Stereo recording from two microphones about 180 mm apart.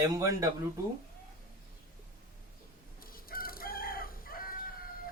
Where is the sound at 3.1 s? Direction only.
55° left (ahead or behind).